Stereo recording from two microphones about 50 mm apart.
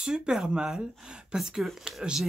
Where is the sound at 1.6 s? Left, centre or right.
Centre.